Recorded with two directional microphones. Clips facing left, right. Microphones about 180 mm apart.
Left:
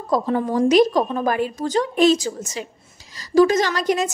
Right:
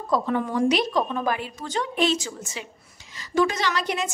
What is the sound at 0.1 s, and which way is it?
A woman's voice, 35° left (ahead or behind).